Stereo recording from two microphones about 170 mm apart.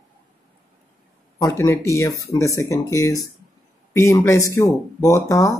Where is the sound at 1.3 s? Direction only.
15° left (ahead or behind).